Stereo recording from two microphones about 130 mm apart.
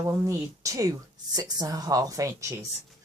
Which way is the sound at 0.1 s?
25° right (ahead or behind).